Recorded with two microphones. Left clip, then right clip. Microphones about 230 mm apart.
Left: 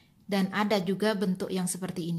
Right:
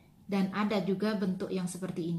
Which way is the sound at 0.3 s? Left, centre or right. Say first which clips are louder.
Left 5 dB; left.